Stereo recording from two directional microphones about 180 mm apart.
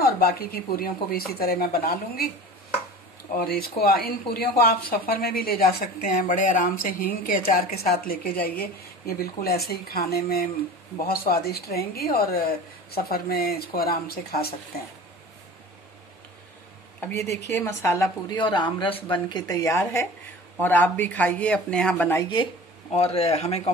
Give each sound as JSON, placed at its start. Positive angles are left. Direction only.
{"t": 0.0, "sound": "speech", "side_deg": 55}
{"t": 3.3, "sound": "speech", "side_deg": 55}
{"t": 17.0, "sound": "a woman's voice", "side_deg": 15}
{"t": 22.2, "sound": "speech", "side_deg": 25}